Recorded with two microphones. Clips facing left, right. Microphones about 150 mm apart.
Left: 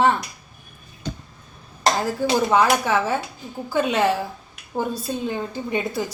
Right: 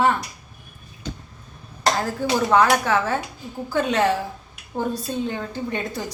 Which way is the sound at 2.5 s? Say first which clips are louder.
Right 3 dB; 15° left (ahead or behind).